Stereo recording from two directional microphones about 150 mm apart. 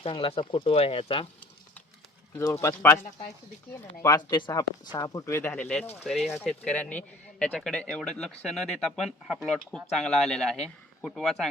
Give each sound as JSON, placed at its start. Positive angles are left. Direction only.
{"t": 0.0, "sound": "speech", "side_deg": 40}
{"t": 2.3, "sound": "speech", "side_deg": 20}
{"t": 4.0, "sound": "speech", "side_deg": 25}
{"t": 6.0, "sound": "speech", "side_deg": 0}